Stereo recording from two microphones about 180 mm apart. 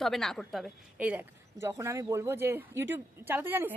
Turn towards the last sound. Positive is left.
turn(degrees=-10)  # may be behind; listen again after turning